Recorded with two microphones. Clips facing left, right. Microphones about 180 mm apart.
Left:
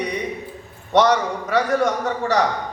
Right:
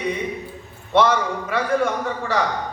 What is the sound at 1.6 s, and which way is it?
Speech, 40° left (ahead or behind).